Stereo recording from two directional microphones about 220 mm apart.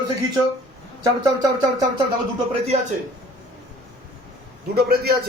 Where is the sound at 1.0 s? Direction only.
15° right (ahead or behind).